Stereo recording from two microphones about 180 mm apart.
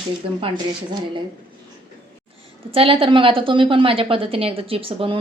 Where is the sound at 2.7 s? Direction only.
30° right (ahead or behind).